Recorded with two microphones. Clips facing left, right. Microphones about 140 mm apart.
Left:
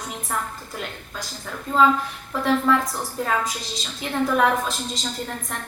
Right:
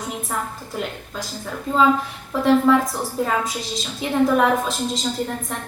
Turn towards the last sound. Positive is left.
turn(degrees=-5)  # may be behind; listen again after turning